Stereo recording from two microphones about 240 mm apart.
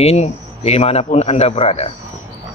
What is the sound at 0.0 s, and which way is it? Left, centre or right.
Speech, left.